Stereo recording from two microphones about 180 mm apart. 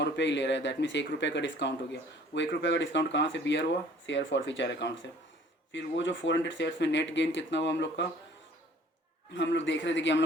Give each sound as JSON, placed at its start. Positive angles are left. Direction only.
{"t": 0.0, "sound": "speech", "side_deg": 80}
{"t": 9.3, "sound": "a man's voice", "side_deg": 90}